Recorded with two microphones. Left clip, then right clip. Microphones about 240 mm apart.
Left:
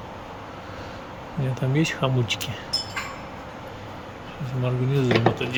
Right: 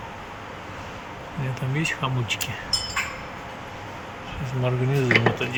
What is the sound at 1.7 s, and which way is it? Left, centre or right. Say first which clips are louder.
Speech: left 2 dB; centre.